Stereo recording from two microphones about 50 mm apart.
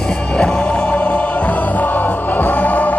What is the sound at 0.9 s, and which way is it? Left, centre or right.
Music, left.